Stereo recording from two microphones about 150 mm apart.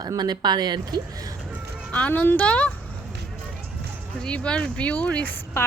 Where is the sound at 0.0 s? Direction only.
25° right (ahead or behind).